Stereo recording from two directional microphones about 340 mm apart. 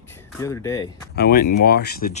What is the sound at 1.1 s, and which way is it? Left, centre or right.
Speech, left.